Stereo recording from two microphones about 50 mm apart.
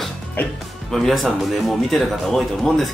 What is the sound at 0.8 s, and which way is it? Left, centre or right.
Speech, centre.